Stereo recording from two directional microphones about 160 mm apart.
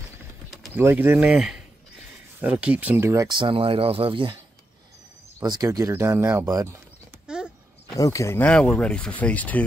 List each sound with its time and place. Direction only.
0.7 s speech: 15° right (ahead or behind); by 4.4 s 30° right (ahead or behind)
5.4 s speech: 25° right (ahead or behind)
7.2 s a sound: 5° right (ahead or behind)
7.9 s speech: 20° left (ahead or behind)